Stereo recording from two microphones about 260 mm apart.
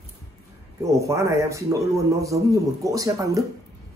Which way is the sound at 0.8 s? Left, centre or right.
Centre.